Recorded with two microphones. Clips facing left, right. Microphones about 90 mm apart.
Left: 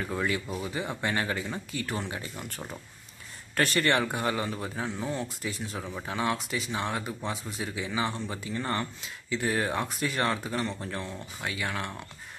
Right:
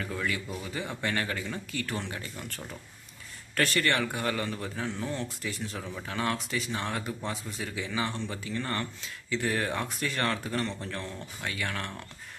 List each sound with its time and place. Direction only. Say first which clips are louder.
0.1 s speech: left 4 dB; 25° left (ahead or behind)